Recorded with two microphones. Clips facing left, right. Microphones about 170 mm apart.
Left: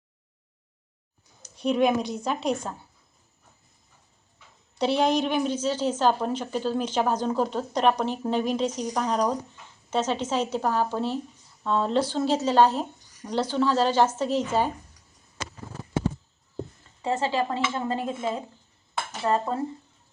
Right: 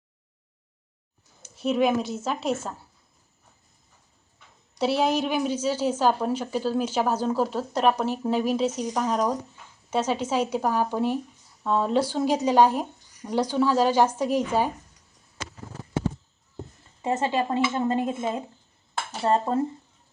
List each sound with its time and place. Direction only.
1.5 s a woman's voice: 5° right (ahead or behind)
4.8 s a woman's voice: 5° right (ahead or behind)
17.0 s a woman's voice: 20° right (ahead or behind)
19.2 s dishes: 25° right (ahead or behind)